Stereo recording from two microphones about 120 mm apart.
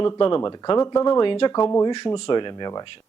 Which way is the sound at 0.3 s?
40° left (ahead or behind).